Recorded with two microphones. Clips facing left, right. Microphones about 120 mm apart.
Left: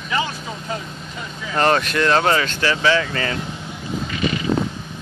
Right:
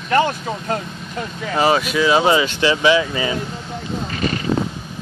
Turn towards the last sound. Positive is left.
turn(degrees=-45)  # may be behind; listen again after turning